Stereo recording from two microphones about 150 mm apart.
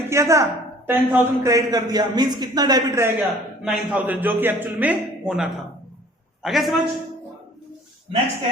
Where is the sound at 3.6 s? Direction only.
5° right (ahead or behind).